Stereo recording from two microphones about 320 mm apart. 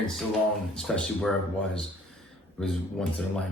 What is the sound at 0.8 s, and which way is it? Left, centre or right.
Speech, centre.